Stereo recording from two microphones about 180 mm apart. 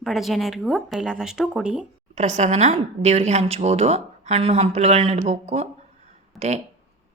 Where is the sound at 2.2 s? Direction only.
40° right (ahead or behind).